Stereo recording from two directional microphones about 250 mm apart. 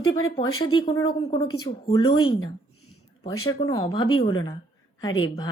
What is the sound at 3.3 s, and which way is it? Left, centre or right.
Speech, left.